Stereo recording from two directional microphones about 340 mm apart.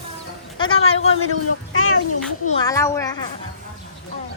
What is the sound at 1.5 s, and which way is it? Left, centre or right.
A child's voice, left.